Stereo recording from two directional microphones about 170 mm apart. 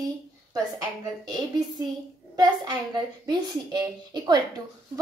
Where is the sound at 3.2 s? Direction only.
25° right (ahead or behind).